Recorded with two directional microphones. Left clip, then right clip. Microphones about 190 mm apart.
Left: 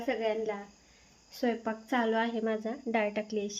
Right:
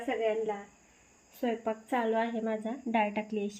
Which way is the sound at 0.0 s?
10° left (ahead or behind).